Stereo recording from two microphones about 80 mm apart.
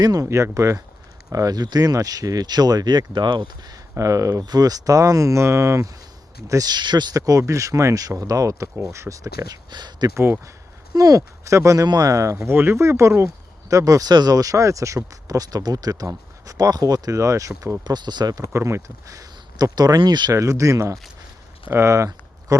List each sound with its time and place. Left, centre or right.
0.0 s speech: right
0.3 s speech: right
3.9 s speech: right
6.5 s speech: right
7.2 s speech: right
9.6 s speech: right
10.9 s speech: right
17.8 s speech: right
18.5 s speech: right
20.0 s speech: right
20.3 s speech: right